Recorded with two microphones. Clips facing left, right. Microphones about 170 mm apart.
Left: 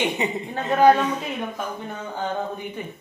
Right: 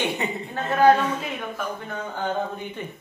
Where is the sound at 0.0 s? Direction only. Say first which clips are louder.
Left 2 dB; 15° left (ahead or behind).